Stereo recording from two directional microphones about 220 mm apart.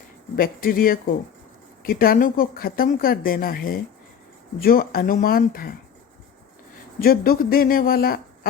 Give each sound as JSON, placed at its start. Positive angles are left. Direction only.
{"t": 0.3, "sound": "speech", "side_deg": 40}
{"t": 7.0, "sound": "speech", "side_deg": 40}